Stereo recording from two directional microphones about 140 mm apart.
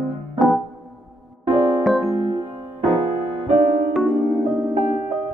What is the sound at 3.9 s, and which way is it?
Electric piano, centre (ahead or behind).